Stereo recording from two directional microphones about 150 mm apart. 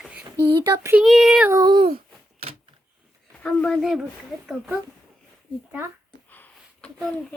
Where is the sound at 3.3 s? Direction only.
5° left (ahead or behind).